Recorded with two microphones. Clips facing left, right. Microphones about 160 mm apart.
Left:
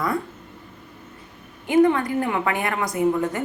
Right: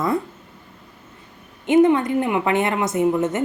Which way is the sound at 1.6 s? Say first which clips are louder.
Right 3 dB; 20° right (ahead or behind).